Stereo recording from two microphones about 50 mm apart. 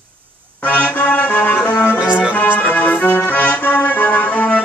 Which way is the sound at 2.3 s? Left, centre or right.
Left.